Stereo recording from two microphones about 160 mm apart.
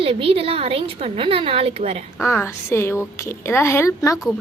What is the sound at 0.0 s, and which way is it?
A woman's voice, 35° right (ahead or behind).